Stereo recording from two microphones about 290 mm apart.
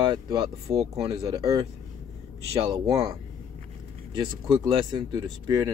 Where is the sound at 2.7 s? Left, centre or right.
Centre.